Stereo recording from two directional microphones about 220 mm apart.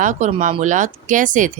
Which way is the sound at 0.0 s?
35° right (ahead or behind).